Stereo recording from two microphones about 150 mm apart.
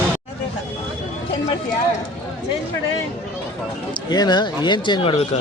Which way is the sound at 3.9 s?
30° left (ahead or behind).